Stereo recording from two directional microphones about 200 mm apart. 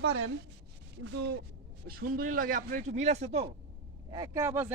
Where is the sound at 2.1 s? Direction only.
45° right (ahead or behind).